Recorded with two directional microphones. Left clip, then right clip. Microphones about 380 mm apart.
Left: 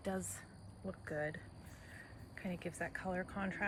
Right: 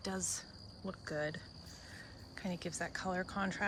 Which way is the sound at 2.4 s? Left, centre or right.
Centre.